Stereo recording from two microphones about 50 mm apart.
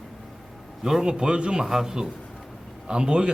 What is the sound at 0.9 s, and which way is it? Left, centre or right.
Speech, centre.